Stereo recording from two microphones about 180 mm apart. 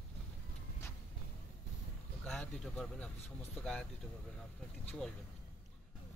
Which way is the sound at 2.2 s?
5° left (ahead or behind).